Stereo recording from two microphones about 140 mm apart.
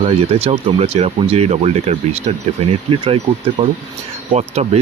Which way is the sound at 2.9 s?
40° right (ahead or behind).